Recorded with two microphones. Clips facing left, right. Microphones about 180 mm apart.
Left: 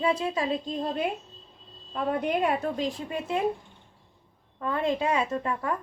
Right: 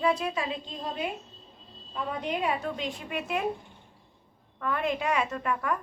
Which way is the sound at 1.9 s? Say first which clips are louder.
Left 5 dB; 50° left (ahead or behind).